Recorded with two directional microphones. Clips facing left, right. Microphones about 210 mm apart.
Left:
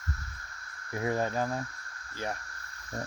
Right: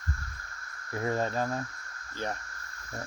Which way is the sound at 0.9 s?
15° left (ahead or behind).